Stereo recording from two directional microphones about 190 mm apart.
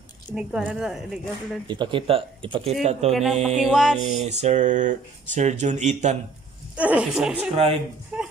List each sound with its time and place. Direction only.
0.3 s speech: 5° right (ahead or behind)
1.7 s speech: 25° right (ahead or behind)
3.1 s speech: centre (ahead or behind)
4.2 s speech: 35° right (ahead or behind)
6.8 s speech: 5° right (ahead or behind)